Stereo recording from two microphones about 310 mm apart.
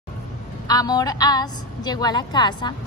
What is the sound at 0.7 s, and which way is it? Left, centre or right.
A woman's voice, centre.